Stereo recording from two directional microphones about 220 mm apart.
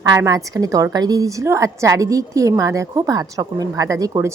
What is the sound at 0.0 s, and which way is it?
A woman's voice, 15° right (ahead or behind).